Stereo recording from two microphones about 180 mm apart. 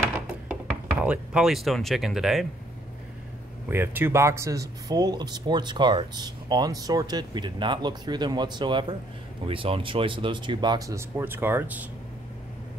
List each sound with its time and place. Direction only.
1.0 s speech: 5° right (ahead or behind)
3.7 s speech: 10° right (ahead or behind)